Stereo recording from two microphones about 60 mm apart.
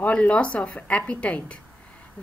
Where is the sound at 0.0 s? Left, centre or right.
Centre.